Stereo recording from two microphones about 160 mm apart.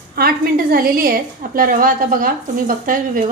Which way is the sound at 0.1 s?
70° right (ahead or behind).